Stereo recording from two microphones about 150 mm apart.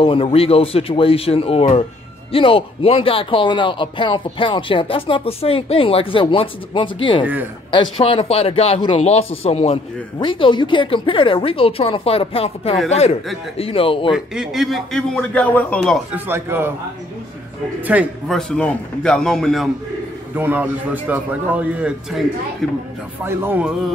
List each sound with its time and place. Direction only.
0.0 s speech: 35° left (ahead or behind)
10.1 s a man's voice: 35° left (ahead or behind)
14.1 s a man's voice: 5° right (ahead or behind)
16.1 s a man's voice: 15° right (ahead or behind)
17.9 s a man's voice: 10° right (ahead or behind)
18.3 s a man's voice: 5° left (ahead or behind)
20.3 s a man's voice: 10° right (ahead or behind)